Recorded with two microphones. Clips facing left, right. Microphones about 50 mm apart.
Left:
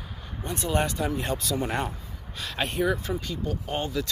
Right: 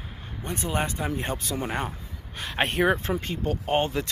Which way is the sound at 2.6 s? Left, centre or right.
Right.